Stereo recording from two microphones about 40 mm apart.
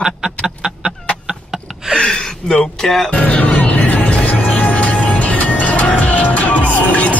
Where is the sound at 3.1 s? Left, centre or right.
Left.